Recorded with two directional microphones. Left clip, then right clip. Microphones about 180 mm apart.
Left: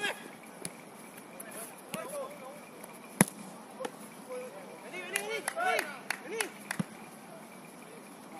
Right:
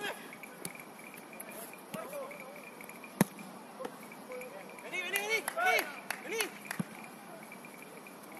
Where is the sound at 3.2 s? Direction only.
45° left (ahead or behind).